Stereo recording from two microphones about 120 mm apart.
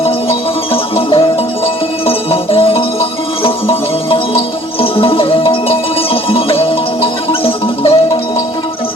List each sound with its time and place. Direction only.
0.7 s music: 50° left (ahead or behind)